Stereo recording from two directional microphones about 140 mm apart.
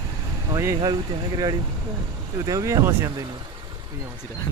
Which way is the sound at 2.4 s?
25° right (ahead or behind).